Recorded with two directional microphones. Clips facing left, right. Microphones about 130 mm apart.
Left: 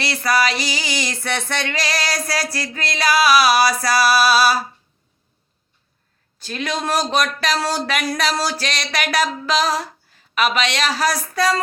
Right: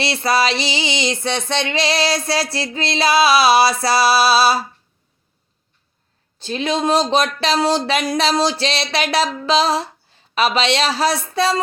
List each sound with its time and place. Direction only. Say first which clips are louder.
0.0 s speech: right 2 dB; 25° right (ahead or behind)
6.4 s speech: right 5 dB; 25° right (ahead or behind)